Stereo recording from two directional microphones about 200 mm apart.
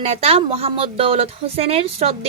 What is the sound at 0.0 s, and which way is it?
A woman's voice, 30° right (ahead or behind).